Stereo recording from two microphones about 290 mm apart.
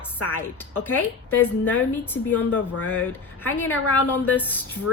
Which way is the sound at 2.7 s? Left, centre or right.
Left.